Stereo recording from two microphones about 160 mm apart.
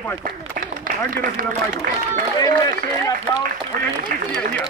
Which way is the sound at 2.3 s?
20° left (ahead or behind).